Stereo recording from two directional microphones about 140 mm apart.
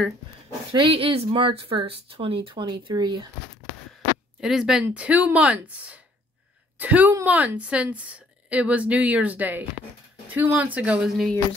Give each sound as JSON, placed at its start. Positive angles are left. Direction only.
{"t": 0.7, "sound": "speech", "side_deg": -40}
{"t": 4.4, "sound": "a woman's voice", "side_deg": -5}